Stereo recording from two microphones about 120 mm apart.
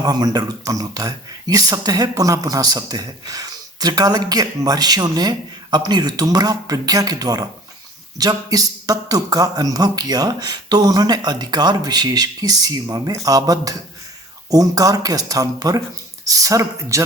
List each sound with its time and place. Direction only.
0.0 s speech: 35° right (ahead or behind)